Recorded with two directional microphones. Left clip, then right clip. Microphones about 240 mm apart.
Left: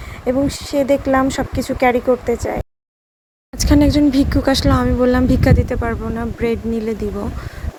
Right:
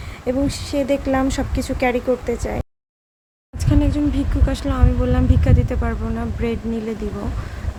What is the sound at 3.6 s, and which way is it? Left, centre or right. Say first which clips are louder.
Speech: left 7 dB; left.